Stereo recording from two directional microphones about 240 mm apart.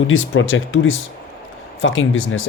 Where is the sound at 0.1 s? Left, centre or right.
Left.